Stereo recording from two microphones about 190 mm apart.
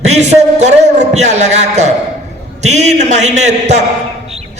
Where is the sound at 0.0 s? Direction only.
35° right (ahead or behind).